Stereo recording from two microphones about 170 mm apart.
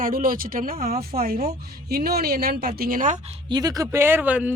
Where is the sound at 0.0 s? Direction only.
55° right (ahead or behind).